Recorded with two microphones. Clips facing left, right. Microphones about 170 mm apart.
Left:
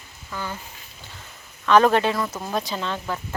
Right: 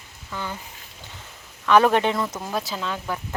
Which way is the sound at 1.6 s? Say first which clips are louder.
Left 1 dB; 15° right (ahead or behind).